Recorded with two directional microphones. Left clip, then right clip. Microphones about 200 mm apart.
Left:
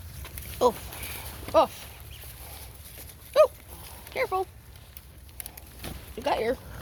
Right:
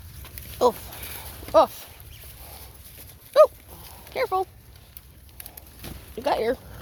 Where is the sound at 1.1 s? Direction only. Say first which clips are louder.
Right 4 dB; 20° right (ahead or behind).